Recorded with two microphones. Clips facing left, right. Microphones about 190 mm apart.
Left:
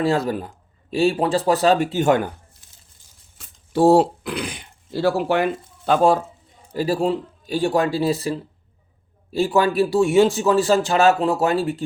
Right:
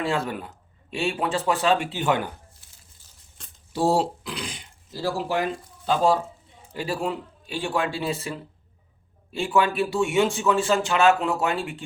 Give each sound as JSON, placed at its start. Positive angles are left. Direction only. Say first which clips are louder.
{"t": 0.0, "sound": "a man's voice", "louder": "left 6 dB", "side_deg": 35}
{"t": 3.7, "sound": "speech", "louder": "left 8 dB", "side_deg": 60}
{"t": 6.7, "sound": "a man's voice", "louder": "left 7 dB", "side_deg": 35}